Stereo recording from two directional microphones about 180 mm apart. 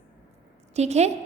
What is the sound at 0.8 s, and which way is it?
Speech, 40° right (ahead or behind).